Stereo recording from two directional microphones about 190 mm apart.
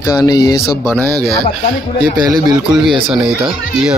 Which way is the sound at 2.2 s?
20° right (ahead or behind).